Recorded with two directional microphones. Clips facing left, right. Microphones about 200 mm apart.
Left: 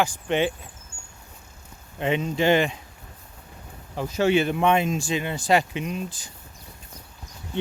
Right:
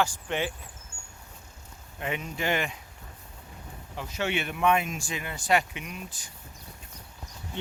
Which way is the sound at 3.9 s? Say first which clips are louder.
Left 10 dB; 40° left (ahead or behind).